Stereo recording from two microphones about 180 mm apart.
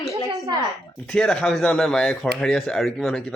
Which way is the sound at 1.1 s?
5° left (ahead or behind).